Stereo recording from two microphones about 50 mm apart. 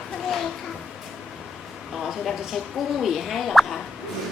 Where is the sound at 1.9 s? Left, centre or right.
Centre.